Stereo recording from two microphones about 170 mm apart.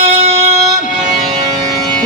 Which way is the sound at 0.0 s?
35° right (ahead or behind).